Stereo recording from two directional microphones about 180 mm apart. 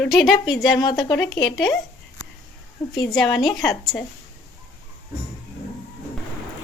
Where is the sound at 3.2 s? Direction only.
25° left (ahead or behind).